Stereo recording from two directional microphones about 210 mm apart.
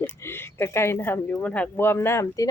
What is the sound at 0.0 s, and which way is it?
Speech, 10° left (ahead or behind).